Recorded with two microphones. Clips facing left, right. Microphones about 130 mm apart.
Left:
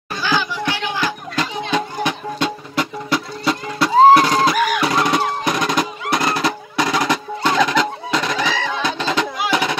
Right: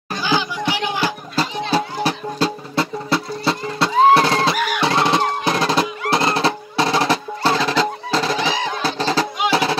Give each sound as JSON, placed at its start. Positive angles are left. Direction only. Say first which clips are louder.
{"t": 0.2, "sound": "music", "louder": "even", "side_deg": -15}
{"t": 1.0, "sound": "music", "louder": "right 1 dB", "side_deg": -35}
{"t": 4.1, "sound": "drum", "louder": "left 2 dB", "side_deg": -30}
{"t": 8.8, "sound": "music", "louder": "right 2 dB", "side_deg": -35}